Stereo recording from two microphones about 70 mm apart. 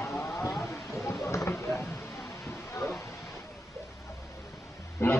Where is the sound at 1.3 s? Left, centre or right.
Left.